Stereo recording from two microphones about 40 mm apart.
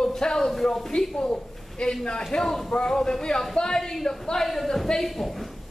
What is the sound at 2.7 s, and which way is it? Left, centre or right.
Speech, left.